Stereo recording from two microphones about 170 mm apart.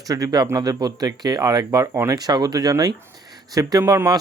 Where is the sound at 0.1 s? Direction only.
20° right (ahead or behind).